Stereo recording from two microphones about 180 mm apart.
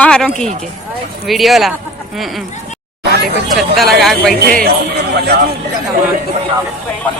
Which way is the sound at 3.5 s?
Centre (ahead or behind).